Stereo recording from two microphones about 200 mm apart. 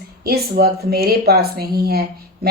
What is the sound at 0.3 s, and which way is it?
Speech, 50° right (ahead or behind).